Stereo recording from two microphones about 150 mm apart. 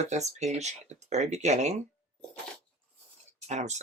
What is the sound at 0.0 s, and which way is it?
Speech, 50° right (ahead or behind).